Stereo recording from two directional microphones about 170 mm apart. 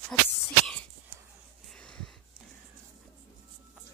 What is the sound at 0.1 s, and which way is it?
Speech, 5° left (ahead or behind).